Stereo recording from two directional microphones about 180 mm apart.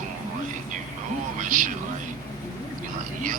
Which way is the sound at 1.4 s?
45° right (ahead or behind).